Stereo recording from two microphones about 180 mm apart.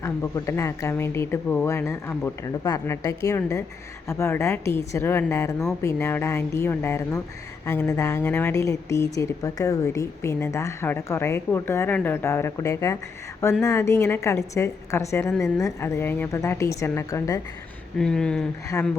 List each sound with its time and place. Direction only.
0.0 s a woman's voice: 15° left (ahead or behind)
17.9 s speech: 5° left (ahead or behind)